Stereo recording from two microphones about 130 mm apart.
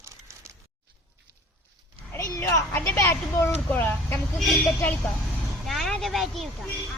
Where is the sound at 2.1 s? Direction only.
25° left (ahead or behind).